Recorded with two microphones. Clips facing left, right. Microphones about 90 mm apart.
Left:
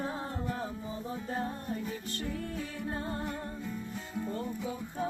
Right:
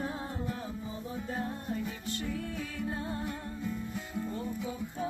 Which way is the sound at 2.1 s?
40° left (ahead or behind).